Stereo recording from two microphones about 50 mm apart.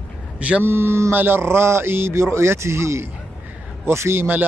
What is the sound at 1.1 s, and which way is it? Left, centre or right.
A man's voice, right.